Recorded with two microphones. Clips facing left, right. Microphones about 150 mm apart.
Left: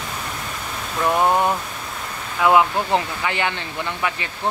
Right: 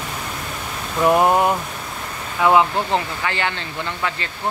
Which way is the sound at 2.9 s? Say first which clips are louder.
Left 1 dB; 15° left (ahead or behind).